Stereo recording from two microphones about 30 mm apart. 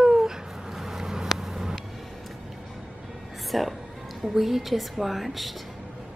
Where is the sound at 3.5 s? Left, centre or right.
Centre.